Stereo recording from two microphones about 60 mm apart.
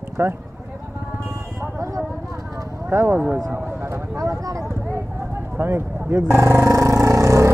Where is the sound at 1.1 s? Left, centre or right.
Right.